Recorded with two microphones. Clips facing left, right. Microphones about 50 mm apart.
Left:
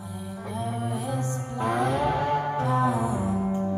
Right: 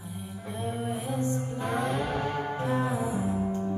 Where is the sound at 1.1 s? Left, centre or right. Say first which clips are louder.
Even; left.